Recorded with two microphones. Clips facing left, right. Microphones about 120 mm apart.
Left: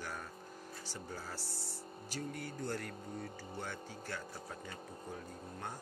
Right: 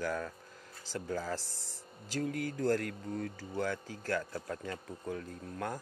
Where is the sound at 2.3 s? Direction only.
90° right.